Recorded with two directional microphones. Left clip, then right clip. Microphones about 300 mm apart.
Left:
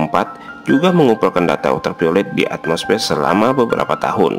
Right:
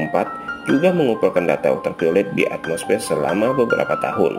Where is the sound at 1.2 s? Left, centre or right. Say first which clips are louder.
Left 2 dB; centre.